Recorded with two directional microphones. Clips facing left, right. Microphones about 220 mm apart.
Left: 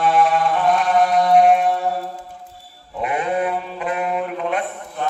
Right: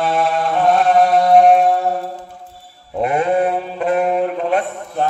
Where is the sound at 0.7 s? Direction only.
40° right (ahead or behind).